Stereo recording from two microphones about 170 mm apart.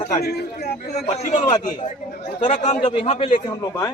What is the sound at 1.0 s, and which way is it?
A man's voice, 45° left (ahead or behind).